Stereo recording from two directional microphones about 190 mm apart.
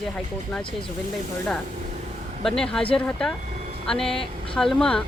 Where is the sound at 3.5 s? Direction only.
40° right (ahead or behind).